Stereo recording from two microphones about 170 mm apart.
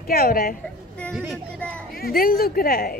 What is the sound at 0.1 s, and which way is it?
Speech, 60° left (ahead or behind).